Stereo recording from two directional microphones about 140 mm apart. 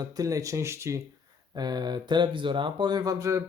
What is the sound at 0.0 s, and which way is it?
Speech, 25° right (ahead or behind).